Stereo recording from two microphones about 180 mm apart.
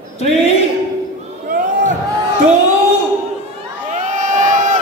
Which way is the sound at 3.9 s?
45° right (ahead or behind).